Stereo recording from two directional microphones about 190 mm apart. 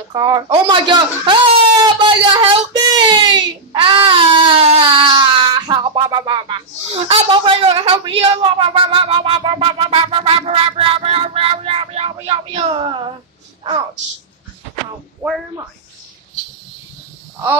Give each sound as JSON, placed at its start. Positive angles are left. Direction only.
{"t": 0.1, "sound": "speech", "side_deg": -20}
{"t": 2.0, "sound": "whimper", "side_deg": -25}
{"t": 15.2, "sound": "speech", "side_deg": -15}